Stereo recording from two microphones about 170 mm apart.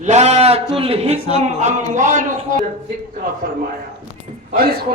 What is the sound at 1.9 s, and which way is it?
Speech, 45° right (ahead or behind).